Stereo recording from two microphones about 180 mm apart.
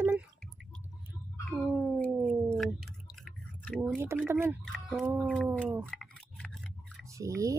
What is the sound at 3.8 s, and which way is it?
Speech, 10° right (ahead or behind).